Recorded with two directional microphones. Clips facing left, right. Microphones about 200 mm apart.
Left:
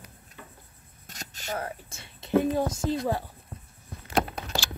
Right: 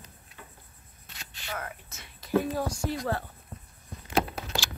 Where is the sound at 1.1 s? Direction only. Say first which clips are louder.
Left 5 dB; 45° left (ahead or behind); by 3.2 s 15° left (ahead or behind).